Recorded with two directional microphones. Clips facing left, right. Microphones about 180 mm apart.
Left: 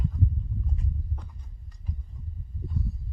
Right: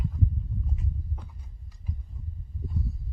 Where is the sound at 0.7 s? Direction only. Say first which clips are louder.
Left 1 dB; 5° right (ahead or behind).